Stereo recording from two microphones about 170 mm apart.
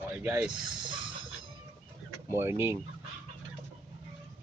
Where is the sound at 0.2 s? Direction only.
15° right (ahead or behind).